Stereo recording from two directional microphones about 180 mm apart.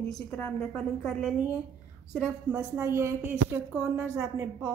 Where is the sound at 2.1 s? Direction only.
5° right (ahead or behind).